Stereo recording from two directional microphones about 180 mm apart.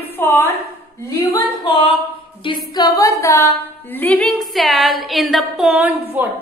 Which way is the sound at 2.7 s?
20° left (ahead or behind).